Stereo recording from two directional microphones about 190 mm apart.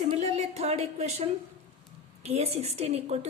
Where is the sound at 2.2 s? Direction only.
35° right (ahead or behind).